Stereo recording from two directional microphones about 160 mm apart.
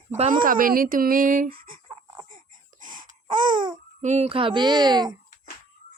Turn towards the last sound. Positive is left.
turn(degrees=-25)  # may be behind; listen again after turning